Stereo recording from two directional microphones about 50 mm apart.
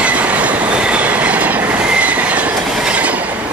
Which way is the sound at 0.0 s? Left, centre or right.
Right.